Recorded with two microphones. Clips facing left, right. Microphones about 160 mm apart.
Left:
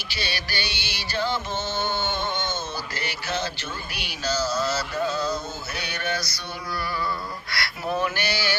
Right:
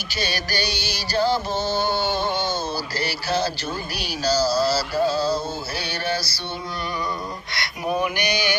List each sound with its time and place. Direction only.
0.1 s music: 45° right (ahead or behind)
7.5 s speech: 15° right (ahead or behind)